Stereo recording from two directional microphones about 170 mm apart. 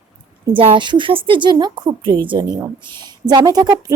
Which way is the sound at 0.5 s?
30° right (ahead or behind).